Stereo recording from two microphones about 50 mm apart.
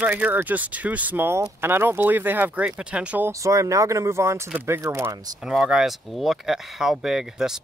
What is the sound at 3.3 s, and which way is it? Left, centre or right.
Speech, right.